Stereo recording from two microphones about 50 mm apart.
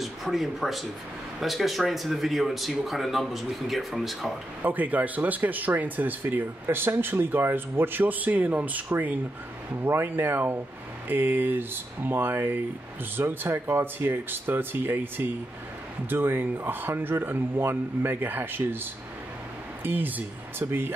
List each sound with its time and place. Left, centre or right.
0.0 s speech: centre
4.6 s speech: right
9.8 s speech: right
19.8 s speech: right